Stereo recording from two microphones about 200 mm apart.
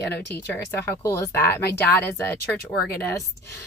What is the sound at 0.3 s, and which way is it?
Speech, 10° left (ahead or behind).